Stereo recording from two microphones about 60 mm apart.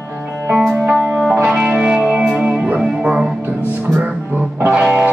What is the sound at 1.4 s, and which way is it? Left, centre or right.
Music, centre.